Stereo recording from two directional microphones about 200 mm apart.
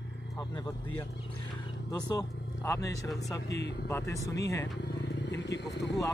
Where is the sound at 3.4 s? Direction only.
60° left (ahead or behind).